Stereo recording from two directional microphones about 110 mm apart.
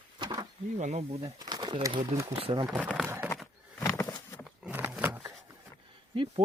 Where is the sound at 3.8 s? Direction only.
25° left (ahead or behind).